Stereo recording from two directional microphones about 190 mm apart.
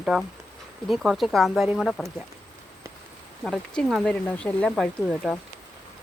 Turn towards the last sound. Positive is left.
turn(degrees=0)  # may be behind; listen again after turning